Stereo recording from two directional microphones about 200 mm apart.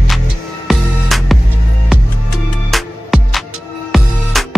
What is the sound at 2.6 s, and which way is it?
Music, centre (ahead or behind).